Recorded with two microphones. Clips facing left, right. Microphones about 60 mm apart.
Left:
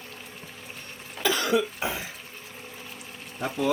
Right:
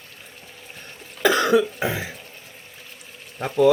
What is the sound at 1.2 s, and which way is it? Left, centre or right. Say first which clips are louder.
Cough: right 7 dB; right.